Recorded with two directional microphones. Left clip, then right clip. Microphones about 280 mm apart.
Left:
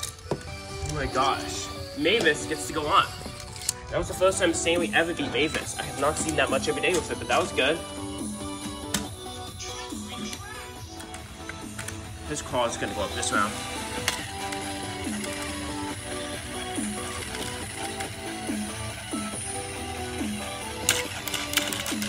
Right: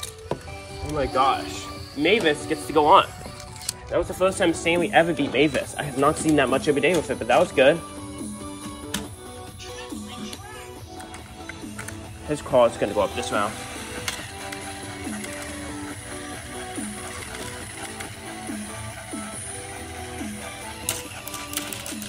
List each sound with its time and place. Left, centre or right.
0.8 s speech: centre
12.5 s speech: centre
12.9 s music: centre
20.0 s music: centre